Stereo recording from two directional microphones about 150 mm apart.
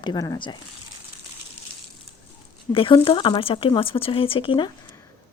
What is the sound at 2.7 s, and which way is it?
Speech, 35° left (ahead or behind).